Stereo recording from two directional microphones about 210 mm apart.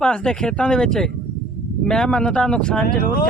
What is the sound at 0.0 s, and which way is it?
Speech, 5° left (ahead or behind).